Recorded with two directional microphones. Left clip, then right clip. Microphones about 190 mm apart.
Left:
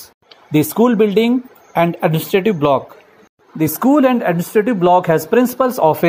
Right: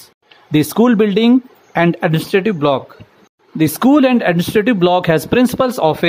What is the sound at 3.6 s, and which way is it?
Speech, 35° right (ahead or behind).